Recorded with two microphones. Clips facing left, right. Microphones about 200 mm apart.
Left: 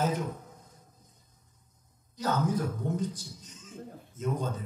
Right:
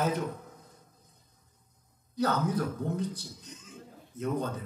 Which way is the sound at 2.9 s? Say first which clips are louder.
Left 1 dB; 60° right (ahead or behind).